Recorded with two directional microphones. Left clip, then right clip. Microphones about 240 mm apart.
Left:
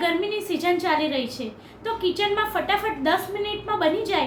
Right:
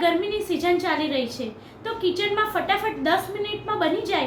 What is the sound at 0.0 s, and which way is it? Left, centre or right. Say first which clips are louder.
A woman's voice: right 2 dB; centre.